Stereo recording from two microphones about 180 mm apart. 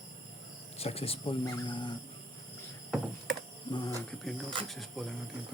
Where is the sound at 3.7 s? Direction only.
25° left (ahead or behind).